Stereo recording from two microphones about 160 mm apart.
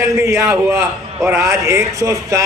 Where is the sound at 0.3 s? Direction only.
20° right (ahead or behind).